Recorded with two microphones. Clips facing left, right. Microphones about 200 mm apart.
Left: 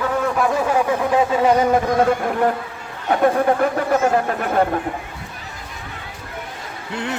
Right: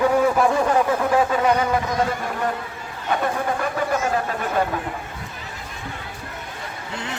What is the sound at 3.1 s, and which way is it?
Speech, 55° left (ahead or behind).